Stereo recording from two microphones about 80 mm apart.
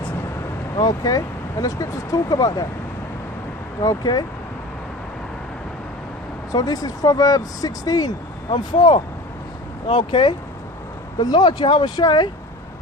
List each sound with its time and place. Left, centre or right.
0.8 s speech: left
3.8 s speech: left
6.5 s speech: left
8.5 s speech: left
9.9 s speech: left
11.2 s speech: left